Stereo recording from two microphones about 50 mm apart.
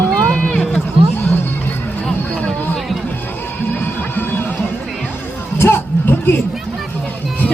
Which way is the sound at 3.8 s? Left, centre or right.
Left.